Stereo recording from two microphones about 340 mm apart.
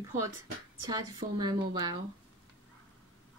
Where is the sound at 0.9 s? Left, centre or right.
Centre.